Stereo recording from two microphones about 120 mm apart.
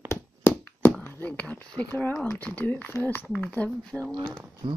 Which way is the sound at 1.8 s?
15° left (ahead or behind).